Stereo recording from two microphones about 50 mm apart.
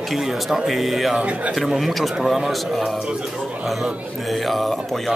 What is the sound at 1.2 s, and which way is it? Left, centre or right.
Speech, right.